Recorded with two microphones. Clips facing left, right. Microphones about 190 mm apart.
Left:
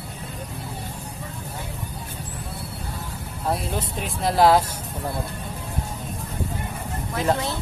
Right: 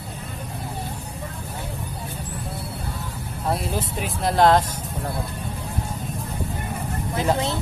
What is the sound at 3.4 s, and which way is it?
Speech, centre (ahead or behind).